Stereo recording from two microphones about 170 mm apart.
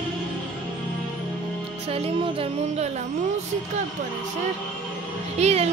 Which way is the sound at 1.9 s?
35° right (ahead or behind).